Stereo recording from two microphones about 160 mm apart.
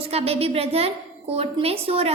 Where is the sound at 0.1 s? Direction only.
40° right (ahead or behind).